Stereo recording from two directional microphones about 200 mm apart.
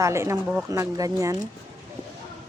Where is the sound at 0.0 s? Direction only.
15° right (ahead or behind).